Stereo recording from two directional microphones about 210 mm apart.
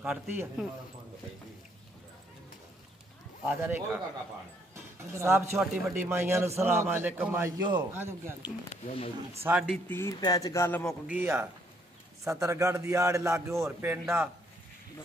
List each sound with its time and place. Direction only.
0.0 s a man's voice: 10° right (ahead or behind)
3.4 s a man's voice: 10° right (ahead or behind)
5.1 s a man's voice: 15° right (ahead or behind)
9.4 s a man's voice: 5° right (ahead or behind)
9.8 s speech: 10° left (ahead or behind)
11.1 s a man's voice: 10° right (ahead or behind)